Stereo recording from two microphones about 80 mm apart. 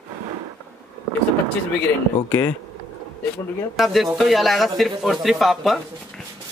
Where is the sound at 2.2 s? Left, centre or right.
Left.